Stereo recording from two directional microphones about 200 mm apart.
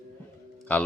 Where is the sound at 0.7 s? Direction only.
5° left (ahead or behind).